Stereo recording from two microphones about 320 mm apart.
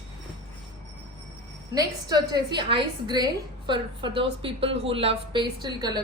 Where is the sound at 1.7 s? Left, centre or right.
Centre.